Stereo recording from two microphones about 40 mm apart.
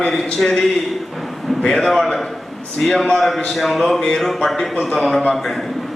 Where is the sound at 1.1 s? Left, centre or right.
Centre.